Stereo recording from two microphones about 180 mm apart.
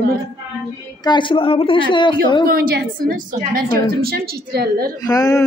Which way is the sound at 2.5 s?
55° right (ahead or behind).